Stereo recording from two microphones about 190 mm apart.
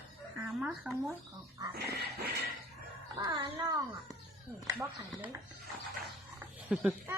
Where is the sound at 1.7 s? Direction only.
55° right (ahead or behind).